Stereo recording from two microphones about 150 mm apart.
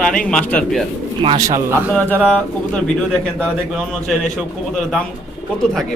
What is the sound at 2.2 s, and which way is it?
Speech, 5° left (ahead or behind).